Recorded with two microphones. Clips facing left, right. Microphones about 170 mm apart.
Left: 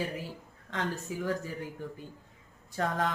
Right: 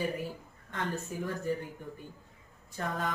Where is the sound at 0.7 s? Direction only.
90° left.